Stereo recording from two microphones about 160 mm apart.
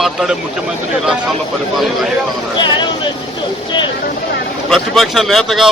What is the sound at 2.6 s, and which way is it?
Speech, 30° left (ahead or behind).